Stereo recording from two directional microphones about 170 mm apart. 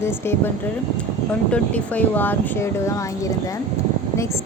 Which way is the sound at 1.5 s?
10° left (ahead or behind).